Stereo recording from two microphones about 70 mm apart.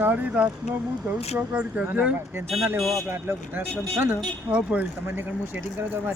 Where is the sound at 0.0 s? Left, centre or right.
Right.